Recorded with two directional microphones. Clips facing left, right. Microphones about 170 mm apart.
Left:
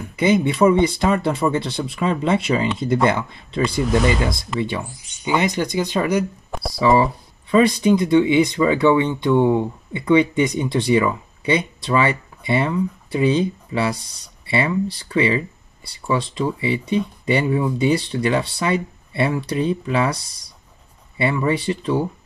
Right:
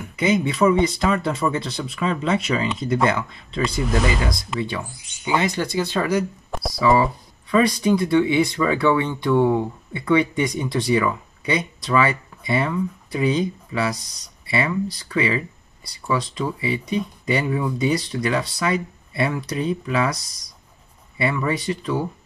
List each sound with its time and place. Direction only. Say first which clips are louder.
0.1 s speech: left 3 dB; 30° left (ahead or behind)
6.5 s speech: even; centre (ahead or behind)
7.5 s speech: left 3 dB; 25° left (ahead or behind)